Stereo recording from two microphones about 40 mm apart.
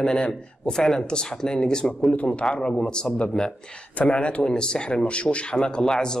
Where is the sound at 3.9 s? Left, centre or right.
Left.